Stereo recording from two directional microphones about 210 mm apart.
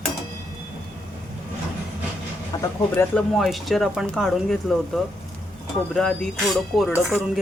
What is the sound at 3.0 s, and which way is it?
Speech, 5° left (ahead or behind).